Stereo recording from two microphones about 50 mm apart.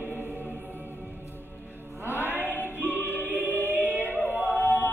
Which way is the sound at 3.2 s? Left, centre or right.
Right.